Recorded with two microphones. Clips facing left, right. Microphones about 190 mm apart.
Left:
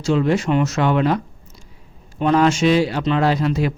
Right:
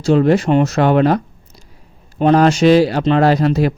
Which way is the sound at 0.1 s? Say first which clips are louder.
Right 5 dB; 45° right (ahead or behind).